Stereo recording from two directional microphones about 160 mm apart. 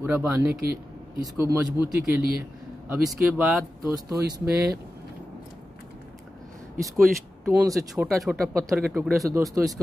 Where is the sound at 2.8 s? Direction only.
10° right (ahead or behind).